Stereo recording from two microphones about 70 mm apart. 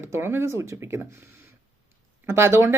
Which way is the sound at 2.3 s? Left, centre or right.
Right.